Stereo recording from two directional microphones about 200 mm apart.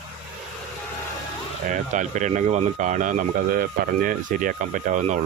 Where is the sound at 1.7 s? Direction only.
40° right (ahead or behind).